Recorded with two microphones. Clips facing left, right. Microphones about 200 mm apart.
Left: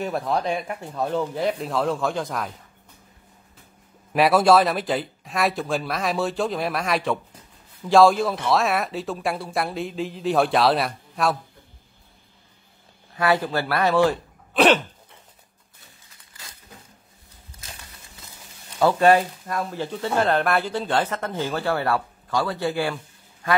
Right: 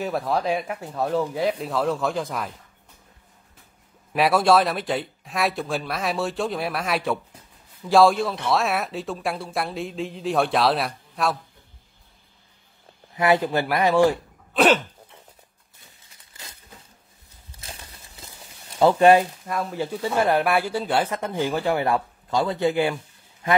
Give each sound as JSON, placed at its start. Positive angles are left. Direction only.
{"t": 0.0, "sound": "speech", "side_deg": 0}
{"t": 4.1, "sound": "speech", "side_deg": 0}
{"t": 13.1, "sound": "speech", "side_deg": -20}
{"t": 14.5, "sound": "throat clearing", "side_deg": 0}
{"t": 16.3, "sound": "a sound", "side_deg": -25}
{"t": 17.6, "sound": "a sound", "side_deg": -30}
{"t": 18.8, "sound": "speech", "side_deg": -20}